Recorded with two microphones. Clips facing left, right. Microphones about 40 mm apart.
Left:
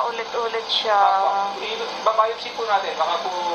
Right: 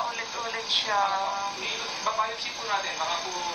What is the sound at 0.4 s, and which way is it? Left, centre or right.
Speech, left.